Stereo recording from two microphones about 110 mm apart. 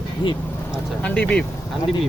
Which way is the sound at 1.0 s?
10° left (ahead or behind).